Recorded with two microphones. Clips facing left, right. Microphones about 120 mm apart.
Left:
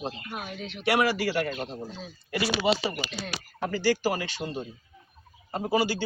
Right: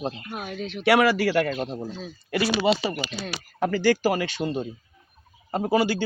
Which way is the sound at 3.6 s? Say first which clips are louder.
Right 4 dB; 60° right (ahead or behind).